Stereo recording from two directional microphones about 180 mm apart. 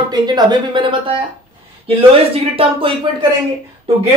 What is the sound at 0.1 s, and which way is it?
Speech, 25° right (ahead or behind).